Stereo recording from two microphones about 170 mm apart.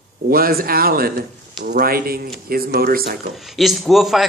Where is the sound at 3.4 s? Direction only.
Centre (ahead or behind).